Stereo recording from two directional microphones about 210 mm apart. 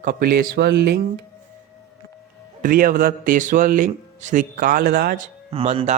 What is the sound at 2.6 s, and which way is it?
Speech, 40° right (ahead or behind).